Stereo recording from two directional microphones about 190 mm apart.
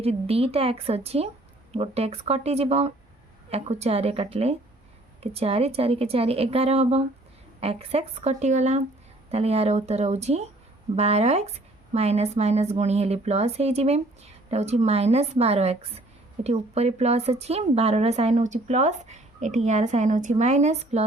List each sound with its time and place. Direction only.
0.0 s speech: 30° right (ahead or behind)